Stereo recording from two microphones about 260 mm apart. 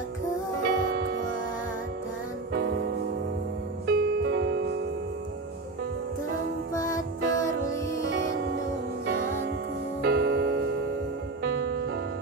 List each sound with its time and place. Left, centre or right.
0.6 s music: right
2.5 s music: right
6.7 s music: centre
10.0 s music: right